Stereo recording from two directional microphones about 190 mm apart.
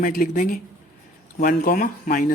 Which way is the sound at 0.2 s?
50° left (ahead or behind).